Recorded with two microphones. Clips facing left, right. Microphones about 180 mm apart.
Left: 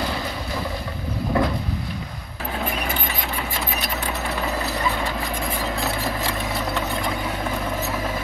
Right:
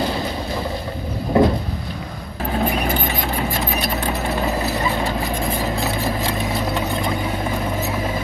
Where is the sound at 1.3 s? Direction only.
25° right (ahead or behind).